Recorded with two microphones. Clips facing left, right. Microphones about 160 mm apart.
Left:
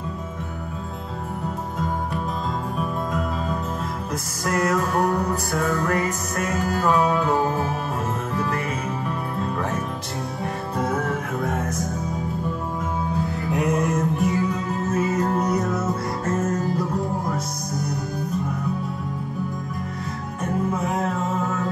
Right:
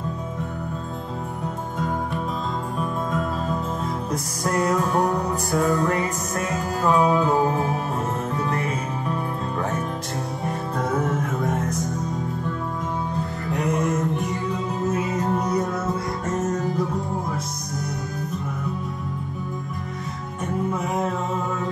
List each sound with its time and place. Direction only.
2.8 s music: centre (ahead or behind)
4.6 s music: centre (ahead or behind)
10.4 s music: centre (ahead or behind)
13.5 s music: centre (ahead or behind)
16.4 s music: 20° right (ahead or behind)